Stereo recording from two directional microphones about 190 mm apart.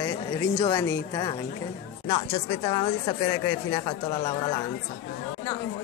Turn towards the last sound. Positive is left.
turn(degrees=25)  # may be behind; listen again after turning